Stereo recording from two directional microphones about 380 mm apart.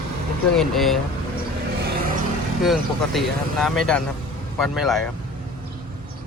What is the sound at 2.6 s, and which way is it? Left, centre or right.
Speech, centre.